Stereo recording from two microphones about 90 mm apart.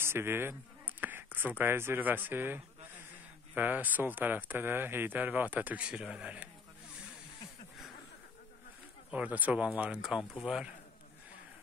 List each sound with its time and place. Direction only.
0.0 s speech: 25° right (ahead or behind)
9.1 s speech: 15° right (ahead or behind)